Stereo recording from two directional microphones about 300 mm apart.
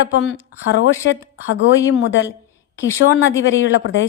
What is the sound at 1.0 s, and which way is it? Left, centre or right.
A woman's voice, left.